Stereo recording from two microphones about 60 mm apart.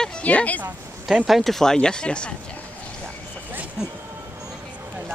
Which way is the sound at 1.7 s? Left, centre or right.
Centre.